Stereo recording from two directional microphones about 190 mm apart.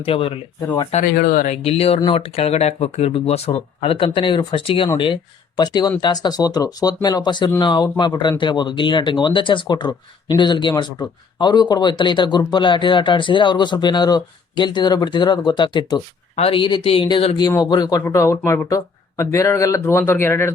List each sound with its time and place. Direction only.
0.0 s speech: 30° left (ahead or behind)
1.1 s speech: 50° left (ahead or behind)
1.6 s speech: 30° left (ahead or behind); by 20.5 s 15° left (ahead or behind)